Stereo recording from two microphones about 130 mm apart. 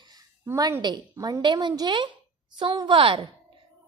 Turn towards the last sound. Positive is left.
turn(degrees=-45)  # may be behind; listen again after turning